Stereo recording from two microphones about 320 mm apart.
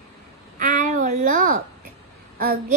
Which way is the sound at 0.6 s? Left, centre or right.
Right.